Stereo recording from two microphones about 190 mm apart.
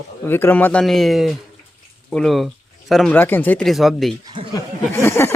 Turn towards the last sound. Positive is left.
turn(degrees=15)  # may be behind; listen again after turning